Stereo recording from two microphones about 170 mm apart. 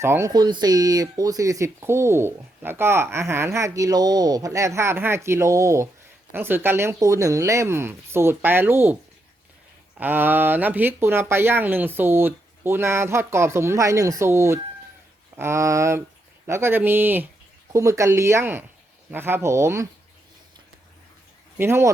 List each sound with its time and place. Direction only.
0.0 s speech: 15° right (ahead or behind)
10.0 s speech: 10° right (ahead or behind)
21.6 s speech: 15° right (ahead or behind)